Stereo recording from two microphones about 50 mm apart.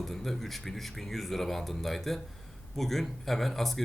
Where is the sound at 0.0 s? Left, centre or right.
Centre.